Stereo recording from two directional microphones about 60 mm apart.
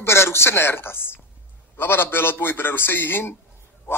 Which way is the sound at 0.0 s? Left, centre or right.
Left.